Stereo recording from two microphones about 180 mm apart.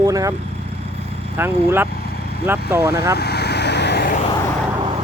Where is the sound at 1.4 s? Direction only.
10° right (ahead or behind).